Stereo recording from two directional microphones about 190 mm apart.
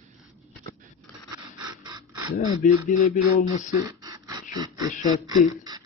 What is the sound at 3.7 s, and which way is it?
Beatboxing, 15° right (ahead or behind).